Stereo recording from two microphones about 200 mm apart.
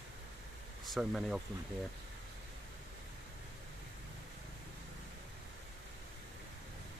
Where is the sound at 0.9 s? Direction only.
Centre (ahead or behind).